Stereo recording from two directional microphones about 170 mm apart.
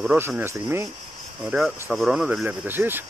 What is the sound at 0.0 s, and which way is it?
Speech, 5° right (ahead or behind).